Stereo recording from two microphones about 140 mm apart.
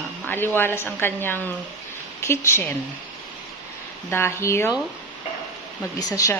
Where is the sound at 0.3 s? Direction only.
15° left (ahead or behind).